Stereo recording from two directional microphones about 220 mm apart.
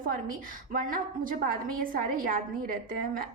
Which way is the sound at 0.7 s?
40° right (ahead or behind).